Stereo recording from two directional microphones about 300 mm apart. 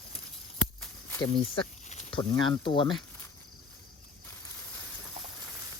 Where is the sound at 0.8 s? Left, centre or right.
Centre.